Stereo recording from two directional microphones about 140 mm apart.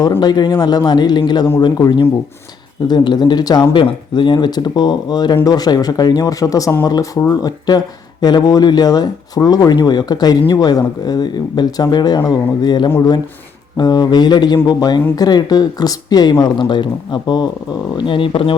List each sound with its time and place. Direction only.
0.2 s speech: 30° left (ahead or behind)